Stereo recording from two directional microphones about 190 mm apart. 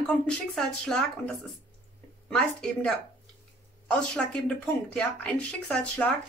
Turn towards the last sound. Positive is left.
turn(degrees=5)  # may be behind; listen again after turning